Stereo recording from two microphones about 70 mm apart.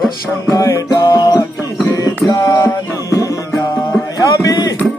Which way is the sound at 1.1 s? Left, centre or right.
Left.